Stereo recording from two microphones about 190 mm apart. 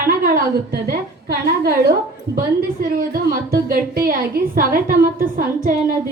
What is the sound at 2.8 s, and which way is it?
A woman's voice, 50° right (ahead or behind).